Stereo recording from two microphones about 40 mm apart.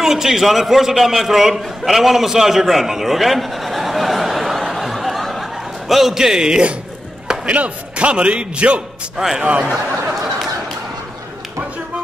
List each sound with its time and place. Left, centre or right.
0.0 s a man's voice: centre
4.6 s chuckle: centre
7.4 s a man's voice: right